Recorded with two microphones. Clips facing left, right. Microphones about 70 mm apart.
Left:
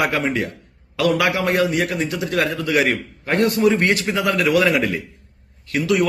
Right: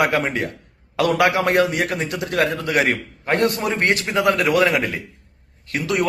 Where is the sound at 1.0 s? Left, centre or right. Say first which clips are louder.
Right 1 dB; right.